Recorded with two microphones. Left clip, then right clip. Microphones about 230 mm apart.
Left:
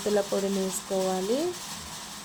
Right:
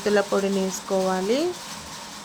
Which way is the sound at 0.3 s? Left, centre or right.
Centre.